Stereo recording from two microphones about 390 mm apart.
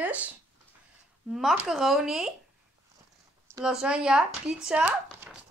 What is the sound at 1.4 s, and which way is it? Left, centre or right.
Speech, centre.